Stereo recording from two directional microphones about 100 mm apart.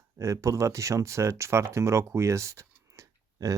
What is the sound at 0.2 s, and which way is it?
Speech, 30° right (ahead or behind).